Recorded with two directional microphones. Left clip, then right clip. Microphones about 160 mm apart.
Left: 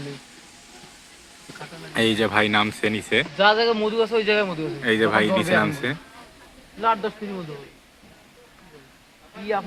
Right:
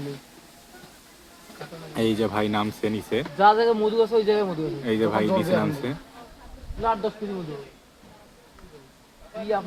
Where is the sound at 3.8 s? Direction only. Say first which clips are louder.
Even; 5° left (ahead or behind).